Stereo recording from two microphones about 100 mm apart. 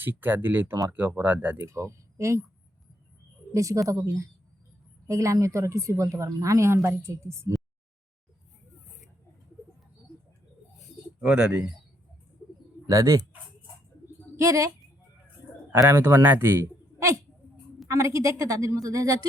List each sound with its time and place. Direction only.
0.0 s speech: 20° right (ahead or behind)
1.6 s speech: 30° right (ahead or behind)
3.5 s speech: 35° right (ahead or behind)
11.2 s speech: 10° right (ahead or behind)
12.9 s speech: 35° right (ahead or behind)
14.3 s speech: 35° right (ahead or behind)
15.4 s bird: 35° left (ahead or behind)
15.9 s speech: 25° right (ahead or behind)